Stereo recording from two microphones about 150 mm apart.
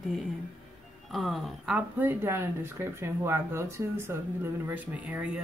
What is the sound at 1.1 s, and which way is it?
A woman's voice, centre (ahead or behind).